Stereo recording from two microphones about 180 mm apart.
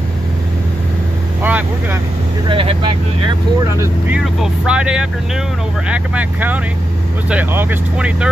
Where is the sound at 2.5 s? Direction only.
30° right (ahead or behind).